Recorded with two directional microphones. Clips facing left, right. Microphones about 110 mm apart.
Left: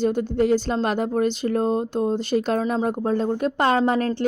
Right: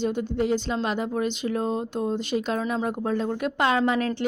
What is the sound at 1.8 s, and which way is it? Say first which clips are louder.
Speech: left 4 dB; 5° left (ahead or behind).